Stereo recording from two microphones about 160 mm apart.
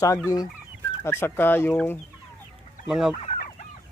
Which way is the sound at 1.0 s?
15° left (ahead or behind).